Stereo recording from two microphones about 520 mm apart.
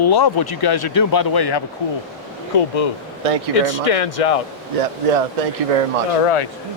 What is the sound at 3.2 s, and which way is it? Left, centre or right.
Speech, right.